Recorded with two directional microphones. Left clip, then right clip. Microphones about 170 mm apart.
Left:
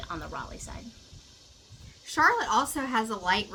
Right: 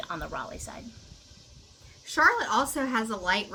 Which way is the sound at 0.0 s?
15° right (ahead or behind).